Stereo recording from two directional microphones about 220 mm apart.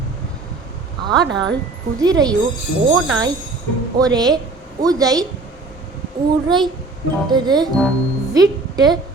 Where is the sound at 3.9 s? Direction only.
15° right (ahead or behind).